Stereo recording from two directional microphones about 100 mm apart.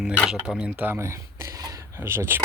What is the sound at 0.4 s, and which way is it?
Speech, 10° right (ahead or behind).